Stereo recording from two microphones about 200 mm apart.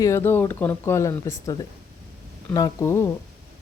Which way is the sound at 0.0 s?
15° left (ahead or behind).